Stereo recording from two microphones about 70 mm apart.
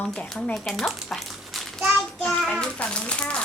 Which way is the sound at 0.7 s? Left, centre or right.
Centre.